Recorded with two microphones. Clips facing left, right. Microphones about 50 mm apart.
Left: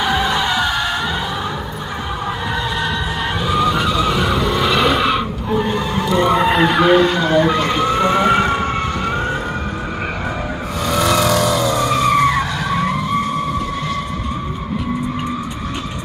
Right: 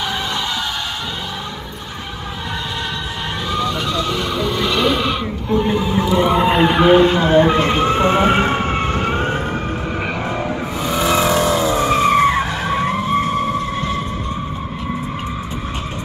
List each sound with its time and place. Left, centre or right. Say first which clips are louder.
0.0 s music: left 5 dB; centre
3.4 s vehicle: left 4 dB; centre
5.7 s vehicle: right 1 dB; centre; by 9.4 s right
10.8 s vehicle: left 1 dB; centre; by 13.6 s right